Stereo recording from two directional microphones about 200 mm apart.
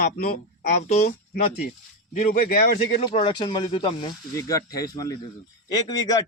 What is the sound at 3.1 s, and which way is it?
A man's voice, 25° left (ahead or behind).